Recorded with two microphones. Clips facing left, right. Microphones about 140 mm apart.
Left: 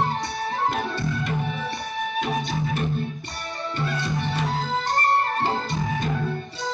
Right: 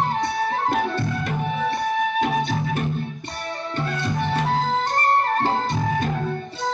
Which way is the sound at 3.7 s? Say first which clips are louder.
Right 1 dB; 50° right (ahead or behind).